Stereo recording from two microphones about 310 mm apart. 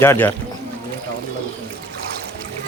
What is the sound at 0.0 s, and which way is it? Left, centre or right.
Speech, centre.